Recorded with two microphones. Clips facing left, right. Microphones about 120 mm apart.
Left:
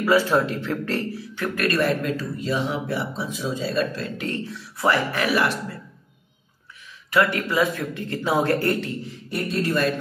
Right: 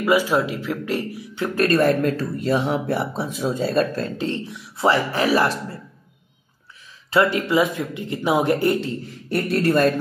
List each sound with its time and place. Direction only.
0.0 s speech: 15° right (ahead or behind)
1.5 s speech: 40° right (ahead or behind)
4.2 s speech: 20° right (ahead or behind)
7.1 s speech: 25° right (ahead or behind)
9.3 s speech: 60° right (ahead or behind)